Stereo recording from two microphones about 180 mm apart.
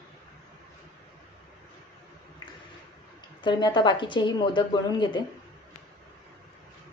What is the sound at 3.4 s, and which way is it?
A woman's voice, 25° left (ahead or behind).